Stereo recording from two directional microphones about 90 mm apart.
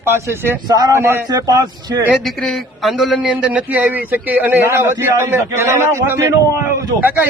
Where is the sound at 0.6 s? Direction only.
50° right (ahead or behind).